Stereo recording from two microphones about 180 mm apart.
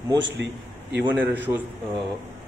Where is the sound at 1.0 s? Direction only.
10° right (ahead or behind).